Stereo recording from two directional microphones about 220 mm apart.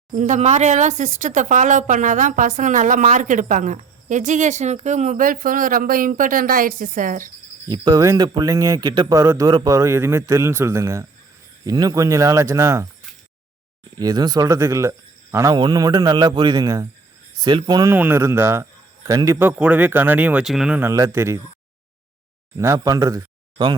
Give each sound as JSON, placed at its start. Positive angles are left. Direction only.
{"t": 0.2, "sound": "speech", "side_deg": -30}
{"t": 7.7, "sound": "speech", "side_deg": -15}
{"t": 14.0, "sound": "speech", "side_deg": -20}
{"t": 22.5, "sound": "speech", "side_deg": -15}